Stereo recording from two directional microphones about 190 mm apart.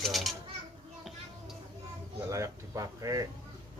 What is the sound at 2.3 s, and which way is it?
Speech, 15° right (ahead or behind).